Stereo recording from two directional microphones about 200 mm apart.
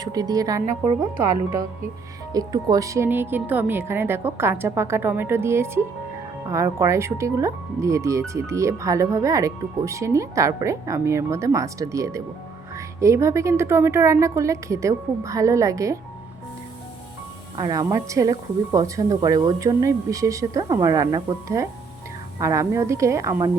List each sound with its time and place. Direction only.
0.0 s speech: 20° right (ahead or behind)
2.3 s speech: 20° right (ahead or behind)
17.6 s speech: 15° right (ahead or behind)